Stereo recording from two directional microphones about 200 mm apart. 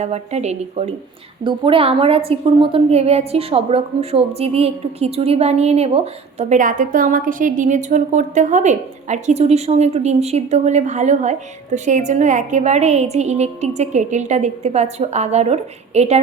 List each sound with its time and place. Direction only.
0.0 s a woman's voice: 35° right (ahead or behind)